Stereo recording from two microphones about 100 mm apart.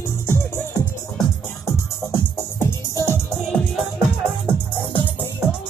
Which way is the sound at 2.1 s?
25° left (ahead or behind).